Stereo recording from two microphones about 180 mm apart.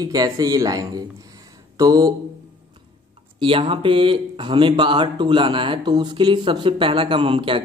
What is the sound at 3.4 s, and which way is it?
Speech, 30° right (ahead or behind).